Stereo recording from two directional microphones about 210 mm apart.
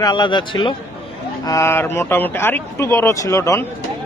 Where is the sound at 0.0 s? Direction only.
20° left (ahead or behind).